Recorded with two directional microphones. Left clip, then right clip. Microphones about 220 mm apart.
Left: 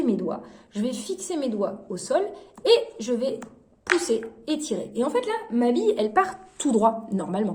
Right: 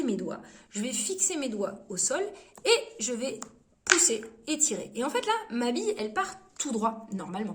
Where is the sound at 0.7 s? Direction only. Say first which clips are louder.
Left 4 dB; 30° right (ahead or behind).